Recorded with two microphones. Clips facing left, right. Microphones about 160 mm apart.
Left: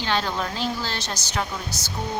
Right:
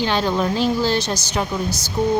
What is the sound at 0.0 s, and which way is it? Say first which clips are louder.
A woman's voice: right 6 dB; 15° right (ahead or behind).